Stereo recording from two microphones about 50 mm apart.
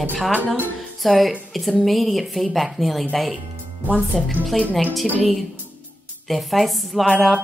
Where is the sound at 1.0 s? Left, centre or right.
Centre.